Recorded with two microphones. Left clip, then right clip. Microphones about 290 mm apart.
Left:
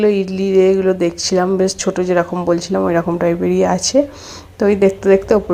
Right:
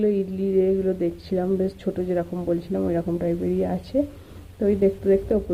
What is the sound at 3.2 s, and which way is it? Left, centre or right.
Speech, left.